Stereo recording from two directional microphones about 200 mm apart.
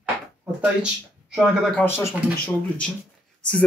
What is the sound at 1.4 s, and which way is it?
Speech, 5° left (ahead or behind).